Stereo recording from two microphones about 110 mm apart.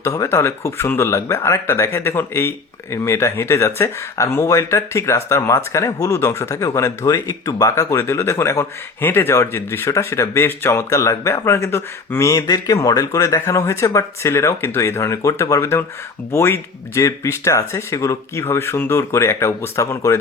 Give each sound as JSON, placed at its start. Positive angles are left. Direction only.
{"t": 0.0, "sound": "speech", "side_deg": 25}